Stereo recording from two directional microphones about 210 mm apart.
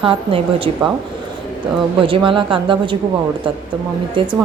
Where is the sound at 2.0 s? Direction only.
25° right (ahead or behind).